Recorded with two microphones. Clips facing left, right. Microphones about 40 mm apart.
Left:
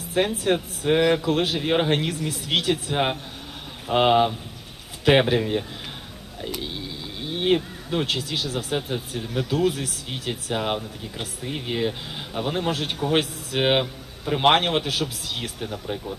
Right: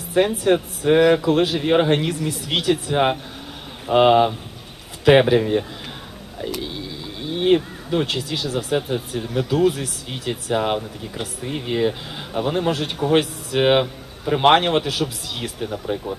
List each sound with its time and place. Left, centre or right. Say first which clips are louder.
0.1 s speech: right 5 dB; centre
7.2 s speech: right 4 dB; centre